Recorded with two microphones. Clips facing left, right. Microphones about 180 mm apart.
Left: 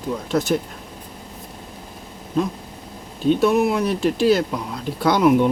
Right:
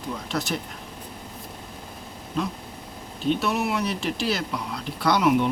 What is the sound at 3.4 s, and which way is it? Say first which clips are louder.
Speech: left 8 dB; 45° left (ahead or behind).